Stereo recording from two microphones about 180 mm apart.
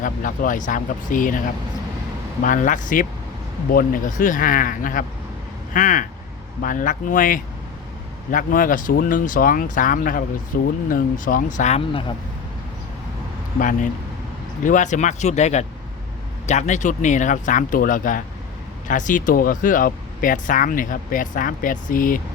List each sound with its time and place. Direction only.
0.0 s speech: 50° left (ahead or behind)
2.4 s speech: 45° left (ahead or behind)
13.6 s speech: 45° left (ahead or behind)